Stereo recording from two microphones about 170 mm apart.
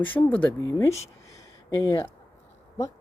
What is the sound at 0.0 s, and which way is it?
Speech, 10° left (ahead or behind).